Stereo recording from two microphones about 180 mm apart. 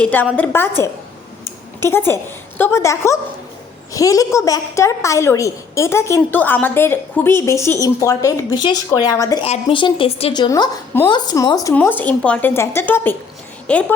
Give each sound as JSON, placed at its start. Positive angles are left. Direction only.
{"t": 0.0, "sound": "a woman's voice", "side_deg": 10}
{"t": 1.8, "sound": "a woman's voice", "side_deg": 15}
{"t": 9.4, "sound": "a woman's voice", "side_deg": 30}
{"t": 11.7, "sound": "a woman's voice", "side_deg": 10}